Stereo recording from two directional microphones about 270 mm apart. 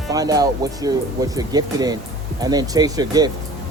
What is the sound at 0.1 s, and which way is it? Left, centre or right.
Speech, centre.